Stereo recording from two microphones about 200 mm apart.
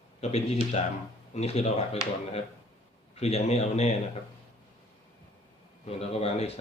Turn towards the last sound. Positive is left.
turn(degrees=30)  # may be behind; listen again after turning